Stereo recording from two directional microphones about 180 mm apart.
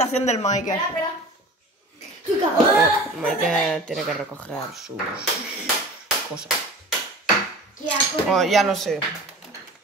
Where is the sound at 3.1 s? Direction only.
Centre (ahead or behind).